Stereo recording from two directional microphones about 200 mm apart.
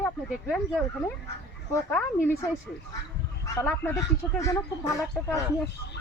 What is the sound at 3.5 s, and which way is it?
Speech, 15° left (ahead or behind).